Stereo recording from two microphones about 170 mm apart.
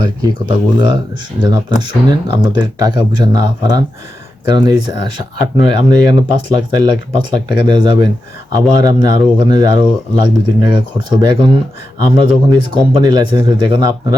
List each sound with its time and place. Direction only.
0.0 s speech: 25° right (ahead or behind)